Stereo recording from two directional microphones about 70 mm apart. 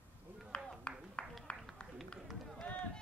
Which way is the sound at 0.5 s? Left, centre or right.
Centre.